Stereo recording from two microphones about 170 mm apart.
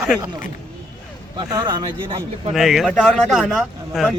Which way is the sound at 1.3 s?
20° right (ahead or behind).